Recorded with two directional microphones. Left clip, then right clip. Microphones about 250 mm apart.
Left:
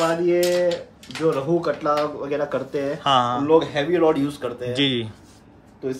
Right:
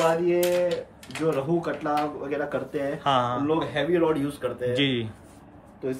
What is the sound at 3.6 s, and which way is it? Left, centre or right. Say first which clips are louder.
A man's voice: left 4 dB; centre.